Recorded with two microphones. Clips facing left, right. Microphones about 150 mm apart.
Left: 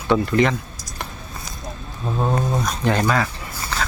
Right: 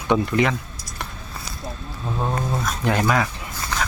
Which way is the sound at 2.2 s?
15° left (ahead or behind).